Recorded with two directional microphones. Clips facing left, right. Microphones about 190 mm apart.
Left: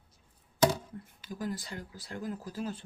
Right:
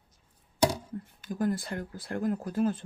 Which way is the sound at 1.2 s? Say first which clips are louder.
Right 7 dB; 50° right (ahead or behind).